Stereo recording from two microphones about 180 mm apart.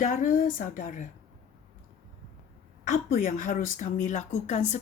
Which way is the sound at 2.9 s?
50° left (ahead or behind).